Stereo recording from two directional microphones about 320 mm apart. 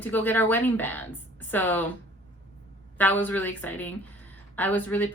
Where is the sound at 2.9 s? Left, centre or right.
Centre.